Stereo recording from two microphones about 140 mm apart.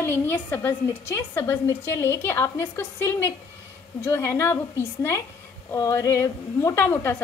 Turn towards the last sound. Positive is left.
turn(degrees=15)  # may be behind; listen again after turning